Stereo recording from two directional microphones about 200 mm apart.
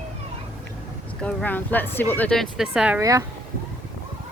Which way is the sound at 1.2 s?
5° left (ahead or behind).